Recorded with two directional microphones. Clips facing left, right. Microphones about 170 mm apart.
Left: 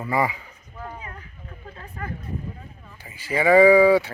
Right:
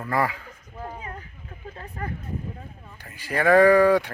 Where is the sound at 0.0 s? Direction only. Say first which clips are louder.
Left 1 dB; 10° left (ahead or behind).